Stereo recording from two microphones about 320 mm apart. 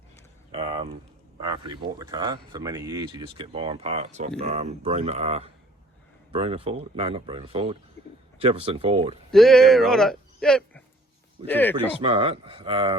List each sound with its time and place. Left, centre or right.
0.5 s a sound: centre
1.4 s speech: centre
9.3 s speech: centre
11.9 s speech: centre